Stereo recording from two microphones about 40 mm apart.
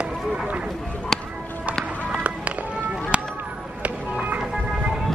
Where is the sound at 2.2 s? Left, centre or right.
Right.